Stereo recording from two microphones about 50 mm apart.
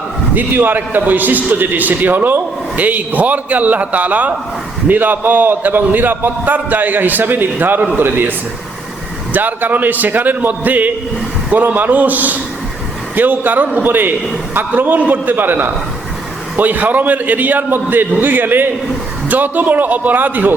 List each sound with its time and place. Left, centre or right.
0.3 s a man's voice: right